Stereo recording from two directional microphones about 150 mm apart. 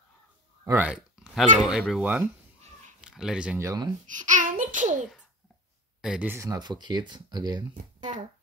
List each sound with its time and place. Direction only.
0.7 s speech: 10° right (ahead or behind)
3.5 s speech: 20° right (ahead or behind)
4.1 s a sound: 55° right (ahead or behind)
5.9 s speech: 5° right (ahead or behind)
6.3 s speech: 25° right (ahead or behind)
7.7 s speech: 55° right (ahead or behind)